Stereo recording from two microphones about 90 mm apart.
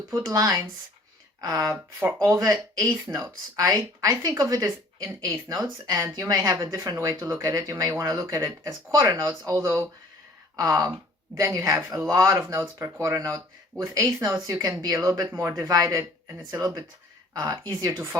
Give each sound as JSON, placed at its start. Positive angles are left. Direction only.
{"t": 0.1, "sound": "speech", "side_deg": -40}
{"t": 2.2, "sound": "speech", "side_deg": -35}
{"t": 14.6, "sound": "speech", "side_deg": -40}
{"t": 17.7, "sound": "speech", "side_deg": -35}